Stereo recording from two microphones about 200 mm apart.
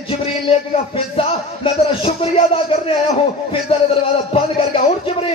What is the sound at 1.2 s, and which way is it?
Speech, 30° left (ahead or behind).